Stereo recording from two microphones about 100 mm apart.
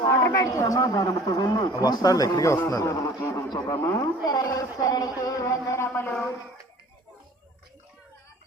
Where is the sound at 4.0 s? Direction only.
40° left (ahead or behind); by 6.1 s 25° left (ahead or behind).